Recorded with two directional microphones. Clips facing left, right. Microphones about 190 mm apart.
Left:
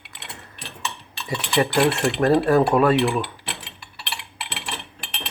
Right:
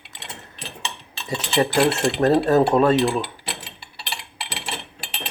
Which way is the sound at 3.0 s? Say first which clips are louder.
Even; 30° right (ahead or behind).